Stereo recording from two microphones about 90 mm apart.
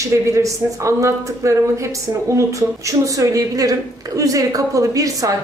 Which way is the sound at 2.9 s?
40° right (ahead or behind).